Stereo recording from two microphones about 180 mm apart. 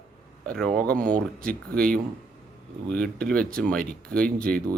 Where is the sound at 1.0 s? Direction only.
50° right (ahead or behind).